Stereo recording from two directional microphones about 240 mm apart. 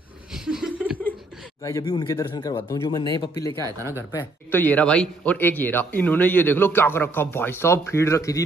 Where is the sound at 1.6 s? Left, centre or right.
Centre.